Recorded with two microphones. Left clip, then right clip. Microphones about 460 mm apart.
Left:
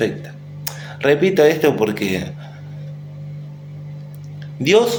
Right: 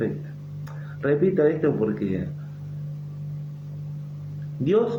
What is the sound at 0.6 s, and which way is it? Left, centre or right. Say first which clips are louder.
Speech: left 9 dB; right.